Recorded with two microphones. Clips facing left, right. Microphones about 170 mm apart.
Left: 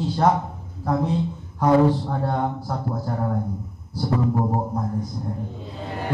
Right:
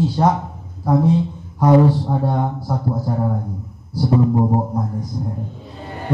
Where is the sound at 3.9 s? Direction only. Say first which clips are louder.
Right 6 dB; 20° right (ahead or behind).